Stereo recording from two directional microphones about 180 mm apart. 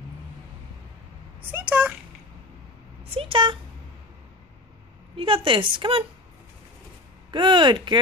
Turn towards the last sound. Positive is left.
turn(degrees=-25)  # may be behind; listen again after turning